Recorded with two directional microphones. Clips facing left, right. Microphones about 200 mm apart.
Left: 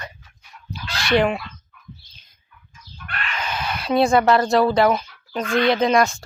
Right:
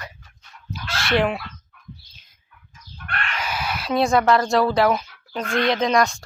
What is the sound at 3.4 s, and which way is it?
Speech, 10° right (ahead or behind).